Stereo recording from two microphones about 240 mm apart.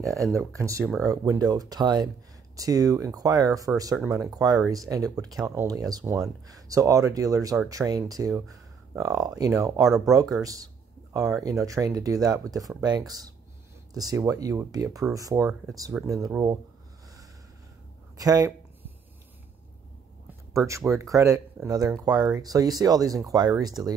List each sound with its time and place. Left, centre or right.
0.0 s speech: centre
9.8 s speech: centre
10.4 s speech: centre
18.1 s a sound: centre
20.5 s speech: centre